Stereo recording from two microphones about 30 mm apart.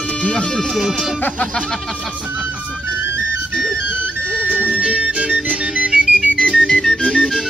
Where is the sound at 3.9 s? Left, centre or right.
Right.